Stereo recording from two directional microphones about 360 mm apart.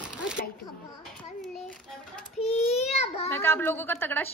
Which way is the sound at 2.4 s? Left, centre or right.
Centre.